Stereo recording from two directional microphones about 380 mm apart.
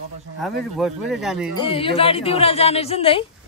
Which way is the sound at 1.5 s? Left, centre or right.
Centre.